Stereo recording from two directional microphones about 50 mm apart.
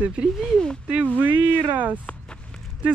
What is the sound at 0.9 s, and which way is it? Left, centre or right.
Speech, right.